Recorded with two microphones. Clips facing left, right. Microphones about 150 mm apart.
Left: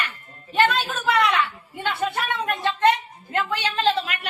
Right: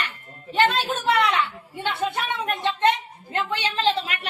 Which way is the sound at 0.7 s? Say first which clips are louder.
Even; 25° right (ahead or behind).